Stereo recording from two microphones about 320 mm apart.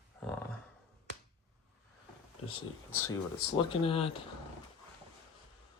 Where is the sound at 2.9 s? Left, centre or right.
Centre.